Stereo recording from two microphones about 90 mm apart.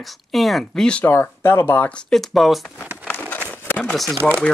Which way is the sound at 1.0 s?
25° left (ahead or behind).